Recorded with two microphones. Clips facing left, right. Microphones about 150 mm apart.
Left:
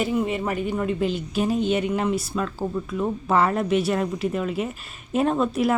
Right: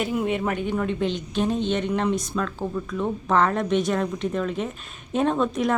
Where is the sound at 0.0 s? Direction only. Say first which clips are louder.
Left 1 dB; centre (ahead or behind).